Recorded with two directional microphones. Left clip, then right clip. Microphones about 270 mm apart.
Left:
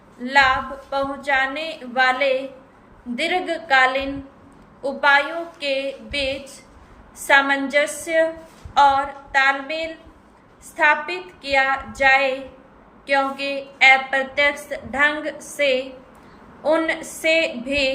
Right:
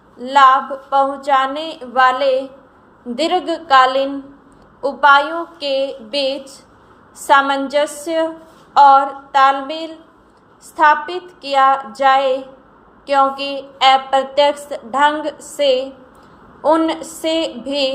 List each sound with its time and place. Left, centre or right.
0.2 s a woman's voice: centre